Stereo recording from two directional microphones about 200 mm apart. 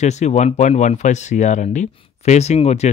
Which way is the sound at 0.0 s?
35° left (ahead or behind).